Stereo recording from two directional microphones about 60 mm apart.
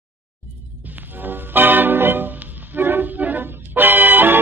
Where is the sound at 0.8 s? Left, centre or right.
Right.